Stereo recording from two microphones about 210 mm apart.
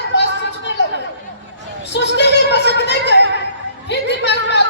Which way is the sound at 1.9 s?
55° left (ahead or behind).